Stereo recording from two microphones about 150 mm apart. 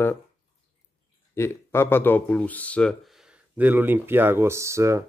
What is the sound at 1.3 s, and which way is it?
Speech, 15° left (ahead or behind).